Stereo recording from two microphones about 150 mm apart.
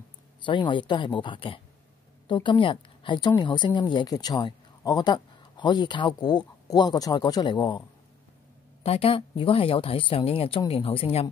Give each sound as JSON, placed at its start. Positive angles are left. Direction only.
{"t": 0.5, "sound": "a woman's voice", "side_deg": 30}
{"t": 8.8, "sound": "a woman's voice", "side_deg": 40}